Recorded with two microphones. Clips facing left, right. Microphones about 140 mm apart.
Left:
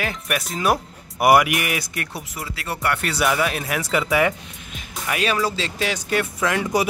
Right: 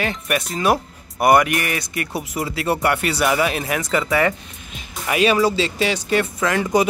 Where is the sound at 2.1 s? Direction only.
20° right (ahead or behind).